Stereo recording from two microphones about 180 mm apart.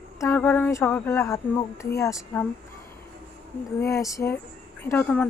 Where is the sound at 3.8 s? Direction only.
15° left (ahead or behind).